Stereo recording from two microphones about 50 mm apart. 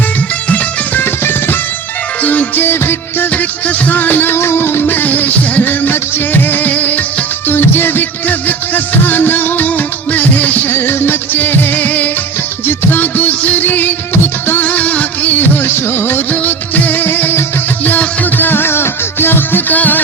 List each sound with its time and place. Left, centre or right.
1.0 s music: left
2.2 s music: left
2.6 s music of bollywood: left
3.3 s music: left
7.4 s music: left
10.7 s music: left
14.6 s music of bollywood: left
16.3 s music: left